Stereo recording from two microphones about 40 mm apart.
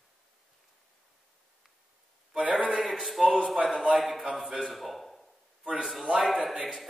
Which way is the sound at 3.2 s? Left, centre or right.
Centre.